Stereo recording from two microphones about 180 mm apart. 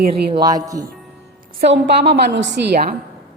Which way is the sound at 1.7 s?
65° right (ahead or behind).